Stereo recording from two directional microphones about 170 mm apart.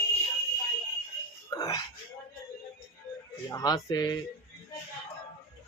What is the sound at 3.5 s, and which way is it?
Speech, 20° left (ahead or behind).